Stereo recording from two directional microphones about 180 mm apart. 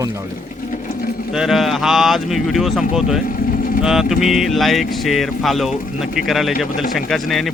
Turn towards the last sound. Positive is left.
turn(degrees=0)  # may be behind; listen again after turning